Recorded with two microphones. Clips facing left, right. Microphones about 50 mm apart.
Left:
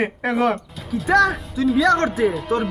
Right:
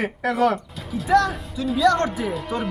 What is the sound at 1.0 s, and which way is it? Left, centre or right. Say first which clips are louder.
Speech: left 2 dB; left.